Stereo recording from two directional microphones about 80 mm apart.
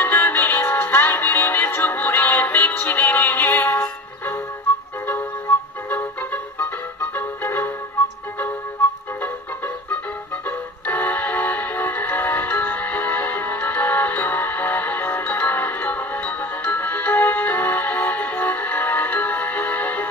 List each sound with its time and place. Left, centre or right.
0.0 s music: left
5.5 s music: left
10.9 s music: centre